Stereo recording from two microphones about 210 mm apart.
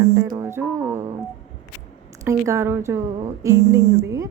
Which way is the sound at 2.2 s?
15° right (ahead or behind).